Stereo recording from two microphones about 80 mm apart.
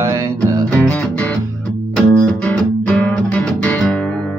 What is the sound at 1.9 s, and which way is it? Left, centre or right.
Music, centre.